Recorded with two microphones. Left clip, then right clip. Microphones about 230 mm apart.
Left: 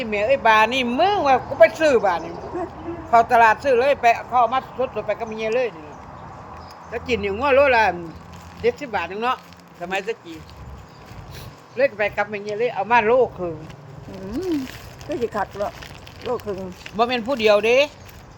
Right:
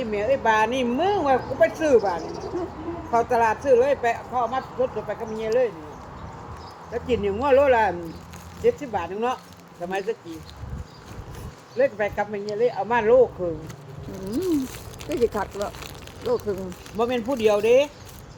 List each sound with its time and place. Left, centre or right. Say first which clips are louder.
0.0 s speech: left 4 dB; left
6.9 s speech: left 1 dB; left
11.8 s speech: left 2 dB; left
15.1 s speech: even; centre
17.0 s speech: left 3 dB; left